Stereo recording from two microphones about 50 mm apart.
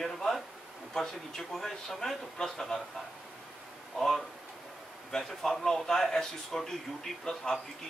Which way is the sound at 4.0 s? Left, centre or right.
Centre.